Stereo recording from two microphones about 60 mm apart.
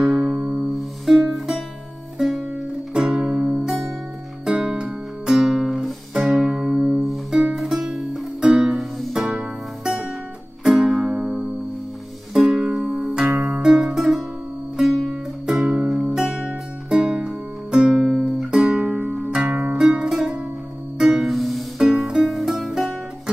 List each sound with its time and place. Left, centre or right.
0.0 s music: centre
0.7 s music: centre
3.2 s music: right; by 5.9 s centre
6.1 s music: centre
8.4 s music: centre
8.6 s music: centre
12.4 s music: centre
19.1 s music: centre
19.5 s music: centre